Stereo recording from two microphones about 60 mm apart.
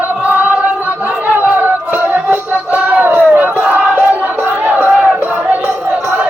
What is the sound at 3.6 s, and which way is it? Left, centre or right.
Battle cry, right.